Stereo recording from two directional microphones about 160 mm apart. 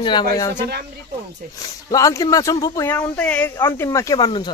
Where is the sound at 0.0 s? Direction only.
30° left (ahead or behind).